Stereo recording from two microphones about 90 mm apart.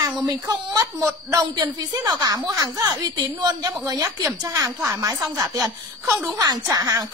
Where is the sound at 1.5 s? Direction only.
50° right (ahead or behind).